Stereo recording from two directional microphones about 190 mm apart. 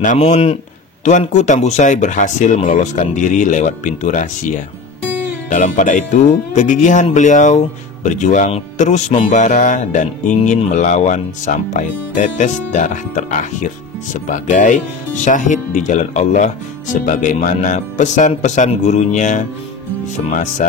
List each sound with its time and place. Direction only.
0.0 s speech: 40° left (ahead or behind)
5.5 s speech: 40° left (ahead or behind)